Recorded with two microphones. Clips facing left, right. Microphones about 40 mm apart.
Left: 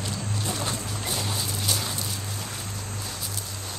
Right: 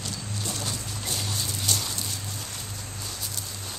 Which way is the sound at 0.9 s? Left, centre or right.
Centre.